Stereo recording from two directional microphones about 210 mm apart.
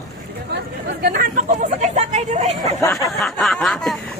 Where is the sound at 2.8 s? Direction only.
15° left (ahead or behind).